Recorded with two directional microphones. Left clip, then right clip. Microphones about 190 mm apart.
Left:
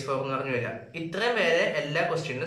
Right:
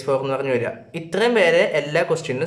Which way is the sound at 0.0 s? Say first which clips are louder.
Right 8 dB; 45° right (ahead or behind).